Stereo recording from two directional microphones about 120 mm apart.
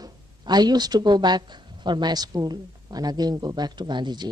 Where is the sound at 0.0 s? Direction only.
35° right (ahead or behind).